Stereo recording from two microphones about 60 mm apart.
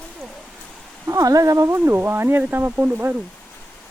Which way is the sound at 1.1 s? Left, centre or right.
Right.